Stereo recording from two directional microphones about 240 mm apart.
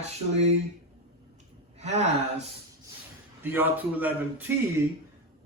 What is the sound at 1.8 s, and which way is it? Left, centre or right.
Speech, right.